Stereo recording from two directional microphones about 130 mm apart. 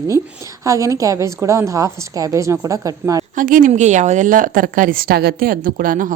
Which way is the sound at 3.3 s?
90° right.